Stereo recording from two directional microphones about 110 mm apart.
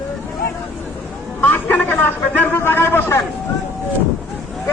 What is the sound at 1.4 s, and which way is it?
A man's voice, 15° left (ahead or behind).